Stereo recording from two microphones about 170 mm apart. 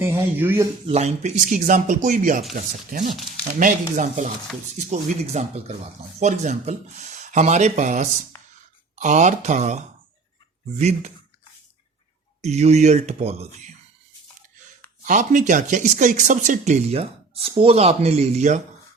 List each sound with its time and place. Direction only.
0.0 s speech: 15° right (ahead or behind)
0.9 s speech: 40° right (ahead or behind)
12.4 s speech: 40° right (ahead or behind)
15.0 s speech: 50° right (ahead or behind)